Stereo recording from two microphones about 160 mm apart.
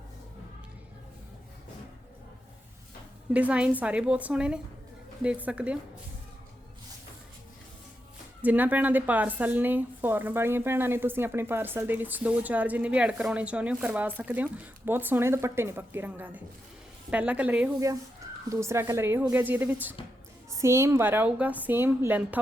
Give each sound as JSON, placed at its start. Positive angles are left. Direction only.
{"t": 3.3, "sound": "speech", "side_deg": -5}
{"t": 8.4, "sound": "speech", "side_deg": -10}